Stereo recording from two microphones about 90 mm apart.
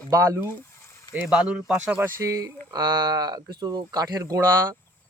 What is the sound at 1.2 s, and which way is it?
Speech, 10° right (ahead or behind).